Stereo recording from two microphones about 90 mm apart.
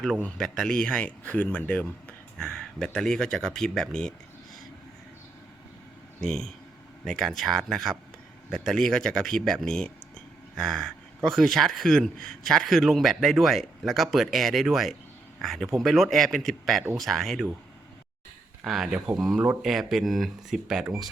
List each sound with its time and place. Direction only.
0.2 s speech: 15° left (ahead or behind)
2.4 s speech: 5° left (ahead or behind)
6.1 s speech: 5° left (ahead or behind)
18.6 s speech: centre (ahead or behind)